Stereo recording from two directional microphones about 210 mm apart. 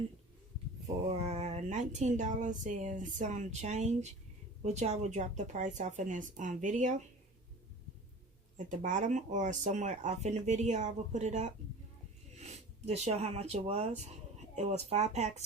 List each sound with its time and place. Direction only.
1.2 s speech: 30° right (ahead or behind)
8.5 s speech: 35° right (ahead or behind)